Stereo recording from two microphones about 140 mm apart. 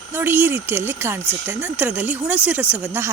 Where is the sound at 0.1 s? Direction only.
15° right (ahead or behind).